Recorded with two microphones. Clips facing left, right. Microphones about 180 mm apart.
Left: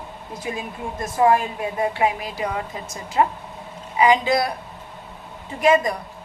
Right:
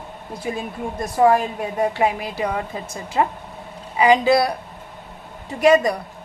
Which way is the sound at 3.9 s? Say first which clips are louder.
Right 3 dB; 35° right (ahead or behind).